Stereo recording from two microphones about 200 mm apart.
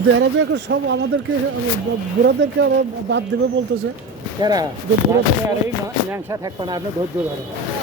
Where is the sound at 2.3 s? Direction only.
60° right (ahead or behind).